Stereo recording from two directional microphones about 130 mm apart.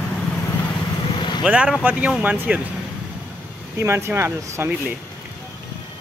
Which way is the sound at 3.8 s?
20° right (ahead or behind).